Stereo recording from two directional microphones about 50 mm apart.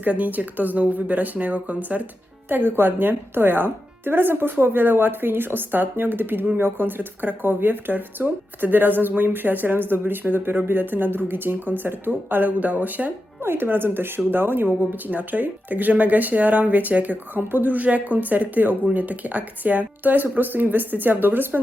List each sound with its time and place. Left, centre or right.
0.0 s speech: right
2.5 s a woman's voice: right
13.4 s a woman's voice: right